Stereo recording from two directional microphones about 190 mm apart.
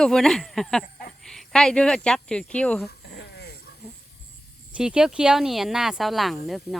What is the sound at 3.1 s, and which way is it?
Dog, 60° left (ahead or behind).